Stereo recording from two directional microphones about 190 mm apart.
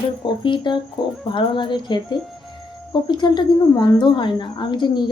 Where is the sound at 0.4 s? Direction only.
25° left (ahead or behind).